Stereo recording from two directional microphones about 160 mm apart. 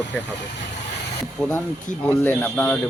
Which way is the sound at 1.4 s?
5° left (ahead or behind).